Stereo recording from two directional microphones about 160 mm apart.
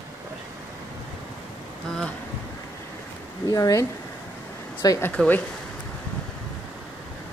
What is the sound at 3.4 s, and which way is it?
Speech, 20° left (ahead or behind).